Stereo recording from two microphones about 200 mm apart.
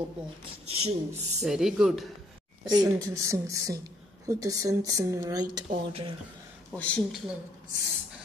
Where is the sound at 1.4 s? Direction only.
Centre (ahead or behind).